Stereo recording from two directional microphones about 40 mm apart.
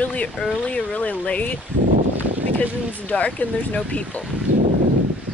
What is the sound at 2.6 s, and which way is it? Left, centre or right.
Speech, left.